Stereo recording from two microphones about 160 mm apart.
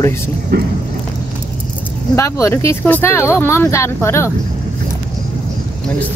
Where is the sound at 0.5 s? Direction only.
90° right.